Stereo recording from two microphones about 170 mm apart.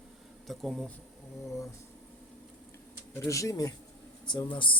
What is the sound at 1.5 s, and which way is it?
Speech, 20° left (ahead or behind).